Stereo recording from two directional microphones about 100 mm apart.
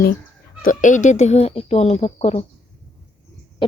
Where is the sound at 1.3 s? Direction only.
80° left.